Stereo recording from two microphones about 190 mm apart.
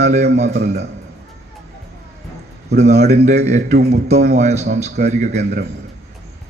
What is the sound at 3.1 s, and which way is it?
Speech, 35° right (ahead or behind).